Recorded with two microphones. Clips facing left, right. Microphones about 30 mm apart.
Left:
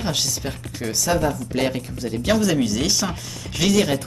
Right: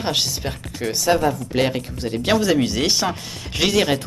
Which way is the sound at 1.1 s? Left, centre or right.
Centre.